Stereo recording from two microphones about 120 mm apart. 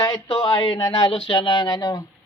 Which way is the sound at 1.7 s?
30° left (ahead or behind).